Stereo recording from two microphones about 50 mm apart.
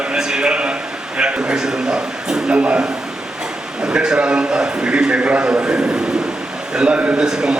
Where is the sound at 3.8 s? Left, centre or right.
Centre.